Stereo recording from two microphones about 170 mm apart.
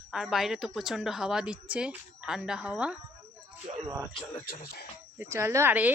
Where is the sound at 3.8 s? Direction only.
20° right (ahead or behind).